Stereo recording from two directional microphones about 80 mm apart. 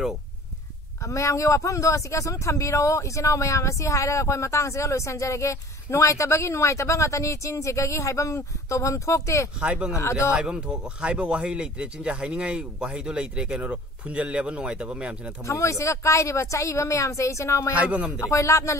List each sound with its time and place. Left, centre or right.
1.0 s speech: left
9.6 s speech: centre
15.4 s speech: left
17.7 s speech: centre
18.2 s speech: left